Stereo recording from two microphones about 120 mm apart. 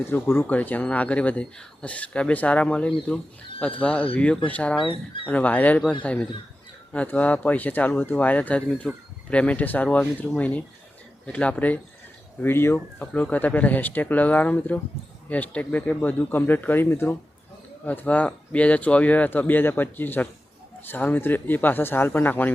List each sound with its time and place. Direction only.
0.1 s speech: 20° left (ahead or behind)